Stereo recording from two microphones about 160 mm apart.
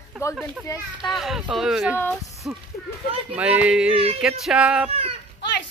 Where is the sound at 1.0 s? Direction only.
Centre (ahead or behind).